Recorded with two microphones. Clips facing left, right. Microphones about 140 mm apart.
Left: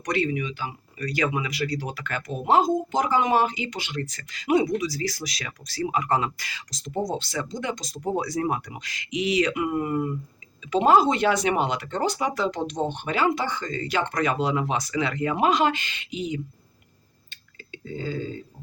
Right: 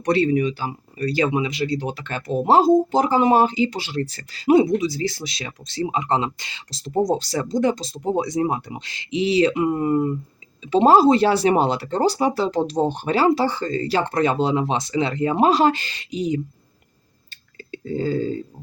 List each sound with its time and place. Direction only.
0.0 s speech: 30° right (ahead or behind)
17.7 s speech: 40° right (ahead or behind)